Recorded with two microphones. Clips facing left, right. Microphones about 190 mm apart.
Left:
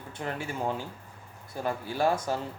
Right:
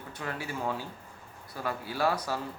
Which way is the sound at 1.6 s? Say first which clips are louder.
Left 2 dB; 25° left (ahead or behind).